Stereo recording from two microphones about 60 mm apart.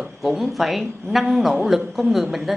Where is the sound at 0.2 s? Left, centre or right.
Centre.